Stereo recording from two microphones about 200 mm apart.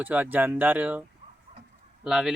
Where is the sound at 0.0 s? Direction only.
10° right (ahead or behind).